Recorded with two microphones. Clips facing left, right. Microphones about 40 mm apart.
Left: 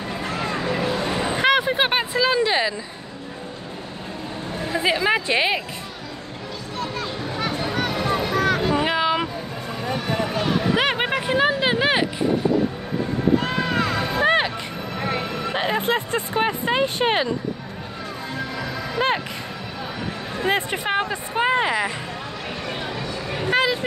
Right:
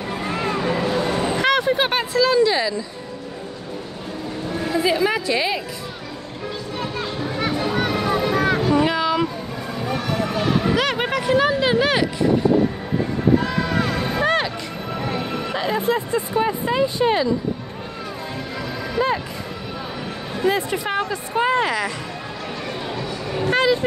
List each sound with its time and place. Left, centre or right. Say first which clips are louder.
1.0 s a sound: right 2 dB; left
1.4 s a sound: left 1 dB; centre
4.7 s a sound: even; left
6.8 s music: right 1 dB; centre
8.2 s vehicle: right 1 dB; centre
8.7 s a sound: right 2 dB; centre
10.7 s speech: even; left
13.4 s music: right 1 dB; left
14.2 s music: left 2 dB; left
15.0 s speech: left 1 dB; left
20.4 s speech: right 2 dB; left; by 21.9 s centre
23.4 s vehicle: right 2 dB; centre